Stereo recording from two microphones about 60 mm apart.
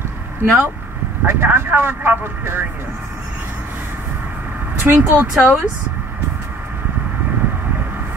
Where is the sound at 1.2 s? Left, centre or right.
Right.